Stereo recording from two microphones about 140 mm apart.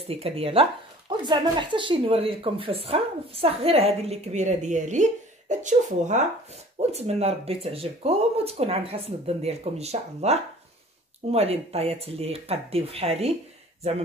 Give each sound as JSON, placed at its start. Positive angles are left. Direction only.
{"t": 0.0, "sound": "speech", "side_deg": -45}